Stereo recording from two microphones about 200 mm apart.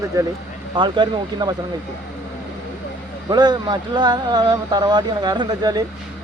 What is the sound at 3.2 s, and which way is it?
Speech, 20° right (ahead or behind).